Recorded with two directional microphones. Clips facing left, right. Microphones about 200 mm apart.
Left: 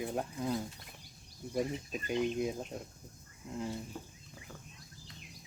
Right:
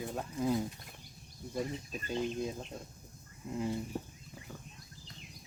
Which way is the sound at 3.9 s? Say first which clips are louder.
Right 6 dB; 35° right (ahead or behind).